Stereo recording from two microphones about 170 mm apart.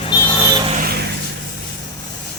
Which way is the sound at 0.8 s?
65° right (ahead or behind).